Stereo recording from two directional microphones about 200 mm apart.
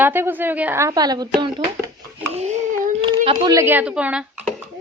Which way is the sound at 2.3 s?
35° right (ahead or behind).